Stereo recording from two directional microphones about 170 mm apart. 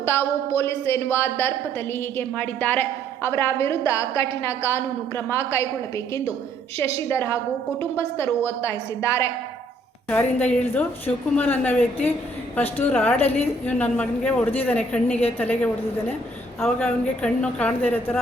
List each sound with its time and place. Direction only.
0.0 s a woman's voice: 15° left (ahead or behind)
7.1 s a woman's voice: 15° left (ahead or behind)